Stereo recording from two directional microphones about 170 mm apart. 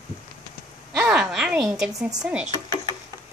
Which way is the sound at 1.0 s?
5° right (ahead or behind).